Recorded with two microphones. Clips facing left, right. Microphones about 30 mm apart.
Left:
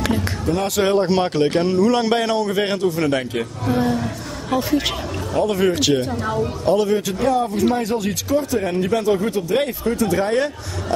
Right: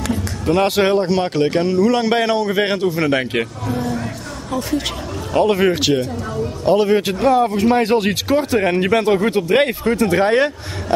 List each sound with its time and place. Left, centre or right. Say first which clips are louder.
0.5 s speech: right 5 dB; right
0.9 s a man's voice: right 1 dB; centre; by 3.3 s right
3.6 s speech: left 3 dB; left
4.6 s speech: even; centre
5.5 s speech: right 2 dB; right
5.9 s speech: left 1 dB; left
6.7 s speech: right 3 dB; right
7.0 s speech: right 4 dB; right